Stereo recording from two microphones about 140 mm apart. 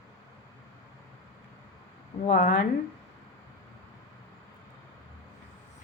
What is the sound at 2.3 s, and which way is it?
Speech, 90° left.